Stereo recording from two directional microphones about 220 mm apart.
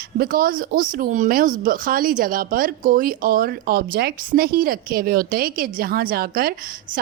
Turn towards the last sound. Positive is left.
turn(degrees=-40)  # may be behind; listen again after turning